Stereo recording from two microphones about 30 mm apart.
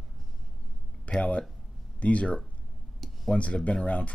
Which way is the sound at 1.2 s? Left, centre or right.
Left.